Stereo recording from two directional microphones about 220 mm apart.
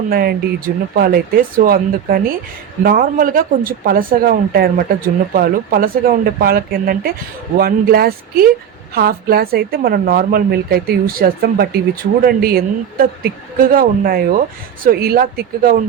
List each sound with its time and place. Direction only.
0.1 s speech: 45° right (ahead or behind)